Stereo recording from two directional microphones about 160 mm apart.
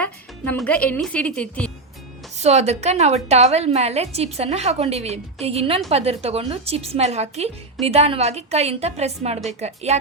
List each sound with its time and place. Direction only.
0.0 s a woman's voice: 10° left (ahead or behind)
2.3 s a woman's voice: 45° right (ahead or behind)